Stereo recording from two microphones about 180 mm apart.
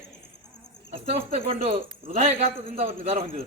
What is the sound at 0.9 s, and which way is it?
A man's voice, 35° right (ahead or behind).